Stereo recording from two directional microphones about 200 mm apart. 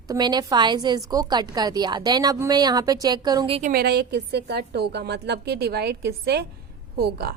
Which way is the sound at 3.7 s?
50° right (ahead or behind).